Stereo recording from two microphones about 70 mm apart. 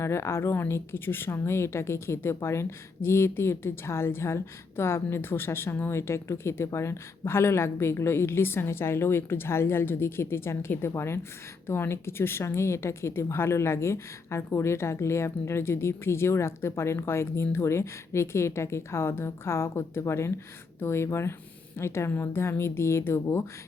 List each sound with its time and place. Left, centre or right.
0.0 s a woman's voice: left